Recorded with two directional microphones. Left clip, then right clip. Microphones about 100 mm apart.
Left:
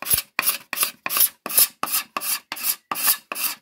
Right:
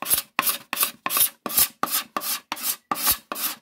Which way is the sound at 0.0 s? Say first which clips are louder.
Even; 15° right (ahead or behind).